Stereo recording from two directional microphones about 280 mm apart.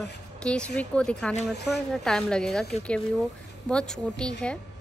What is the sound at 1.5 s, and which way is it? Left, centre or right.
Speech, left.